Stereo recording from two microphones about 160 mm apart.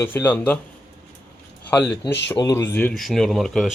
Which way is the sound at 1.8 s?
5° left (ahead or behind).